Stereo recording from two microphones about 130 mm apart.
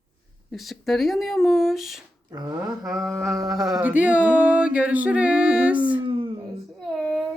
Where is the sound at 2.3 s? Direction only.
30° right (ahead or behind).